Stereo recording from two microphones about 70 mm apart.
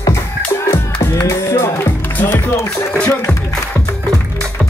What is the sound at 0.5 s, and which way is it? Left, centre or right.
Music, left.